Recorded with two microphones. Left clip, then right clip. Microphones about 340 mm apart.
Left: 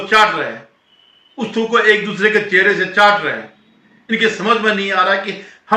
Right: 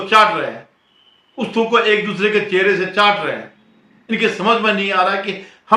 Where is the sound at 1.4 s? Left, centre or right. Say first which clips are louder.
Even; centre.